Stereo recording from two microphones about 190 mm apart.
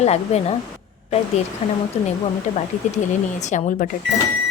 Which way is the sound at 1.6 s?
35° left (ahead or behind).